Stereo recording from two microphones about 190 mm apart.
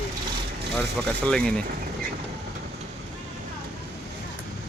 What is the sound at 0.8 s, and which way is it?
Speech, 5° left (ahead or behind).